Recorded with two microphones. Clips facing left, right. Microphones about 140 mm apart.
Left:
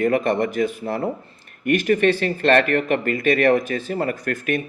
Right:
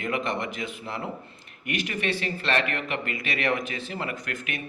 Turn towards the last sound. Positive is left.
turn(degrees=45)  # may be behind; listen again after turning